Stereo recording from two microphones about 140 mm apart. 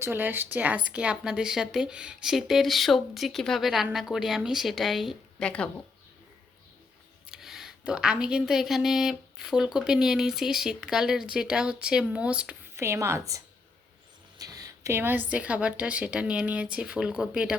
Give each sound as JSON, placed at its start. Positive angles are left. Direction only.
{"t": 0.0, "sound": "speech", "side_deg": -15}
{"t": 7.3, "sound": "speech", "side_deg": 0}
{"t": 12.7, "sound": "a woman's voice", "side_deg": -20}